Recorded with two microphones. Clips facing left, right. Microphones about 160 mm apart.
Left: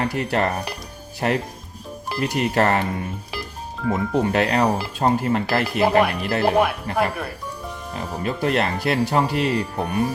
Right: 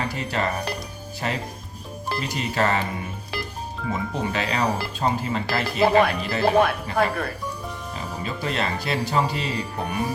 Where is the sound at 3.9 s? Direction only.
60° left (ahead or behind).